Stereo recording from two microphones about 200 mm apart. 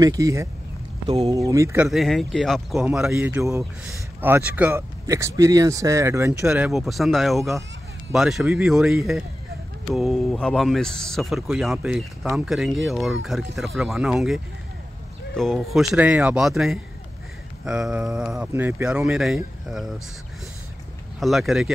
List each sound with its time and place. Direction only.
0.0 s speech: 15° right (ahead or behind)
1.0 s speech: 30° right (ahead or behind)
1.3 s speech: 15° right (ahead or behind)
1.9 s speech: centre (ahead or behind)
21.2 s speech: centre (ahead or behind)